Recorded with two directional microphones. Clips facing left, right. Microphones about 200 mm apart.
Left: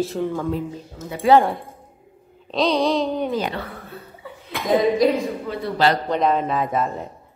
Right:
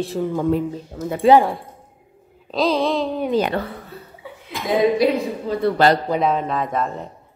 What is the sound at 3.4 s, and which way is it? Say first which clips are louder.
Speech: right 5 dB; 60° right (ahead or behind).